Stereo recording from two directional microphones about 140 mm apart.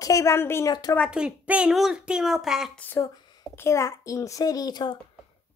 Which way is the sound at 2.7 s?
15° left (ahead or behind).